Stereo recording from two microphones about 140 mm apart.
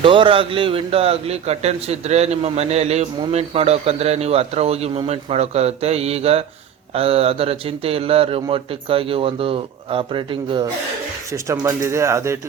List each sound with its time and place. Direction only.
0.0 s a man's voice: 35° right (ahead or behind)
11.3 s speech: 20° right (ahead or behind)